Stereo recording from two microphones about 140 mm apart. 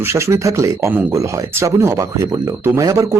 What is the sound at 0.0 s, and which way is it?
Speech, 20° right (ahead or behind).